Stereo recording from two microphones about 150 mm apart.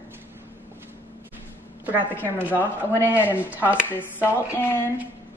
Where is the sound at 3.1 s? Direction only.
15° left (ahead or behind).